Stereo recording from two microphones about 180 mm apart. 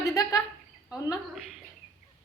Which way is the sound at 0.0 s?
20° left (ahead or behind).